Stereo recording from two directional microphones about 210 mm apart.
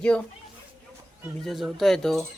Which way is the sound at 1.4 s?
Centre (ahead or behind).